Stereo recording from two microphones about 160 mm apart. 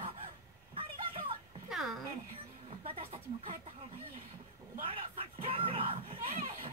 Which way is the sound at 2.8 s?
35° right (ahead or behind).